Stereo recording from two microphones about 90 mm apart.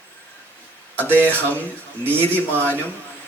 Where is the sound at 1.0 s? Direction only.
20° left (ahead or behind).